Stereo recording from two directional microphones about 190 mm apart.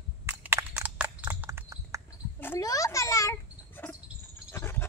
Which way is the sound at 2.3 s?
15° left (ahead or behind).